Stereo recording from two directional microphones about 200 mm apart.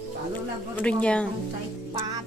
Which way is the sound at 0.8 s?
5° left (ahead or behind).